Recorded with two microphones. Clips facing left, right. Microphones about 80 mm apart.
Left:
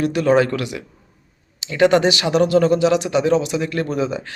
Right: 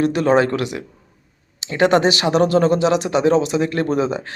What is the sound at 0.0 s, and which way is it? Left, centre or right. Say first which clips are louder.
Speech: even; right.